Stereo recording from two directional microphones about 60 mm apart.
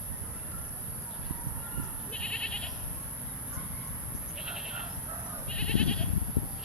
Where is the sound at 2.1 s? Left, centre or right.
Centre.